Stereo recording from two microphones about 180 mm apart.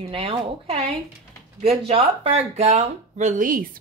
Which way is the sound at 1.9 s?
30° right (ahead or behind).